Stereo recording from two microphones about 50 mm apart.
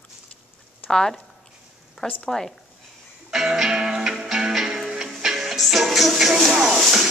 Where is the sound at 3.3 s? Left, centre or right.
Centre.